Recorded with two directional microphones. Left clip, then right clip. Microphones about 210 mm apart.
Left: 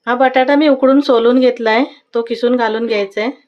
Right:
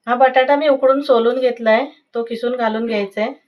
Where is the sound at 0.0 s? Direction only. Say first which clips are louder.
Left 1 dB; 50° left (ahead or behind).